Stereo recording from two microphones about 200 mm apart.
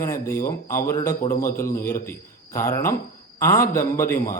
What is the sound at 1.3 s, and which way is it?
Speech, 45° left (ahead or behind).